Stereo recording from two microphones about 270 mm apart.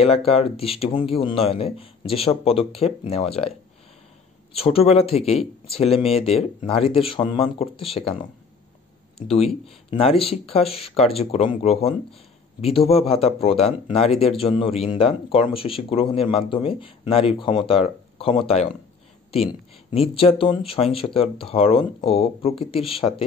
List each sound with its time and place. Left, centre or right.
0.0 s speech: left
4.6 s speech: left
9.8 s speech: left